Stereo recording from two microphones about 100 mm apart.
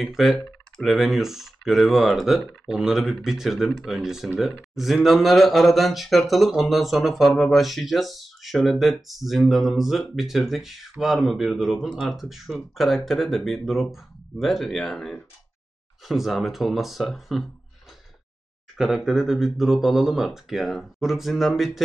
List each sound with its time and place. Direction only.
0.0 s speech: centre (ahead or behind)
18.8 s speech: centre (ahead or behind)